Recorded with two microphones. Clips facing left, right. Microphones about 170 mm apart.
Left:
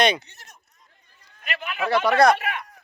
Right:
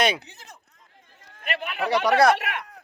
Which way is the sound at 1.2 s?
75° right (ahead or behind).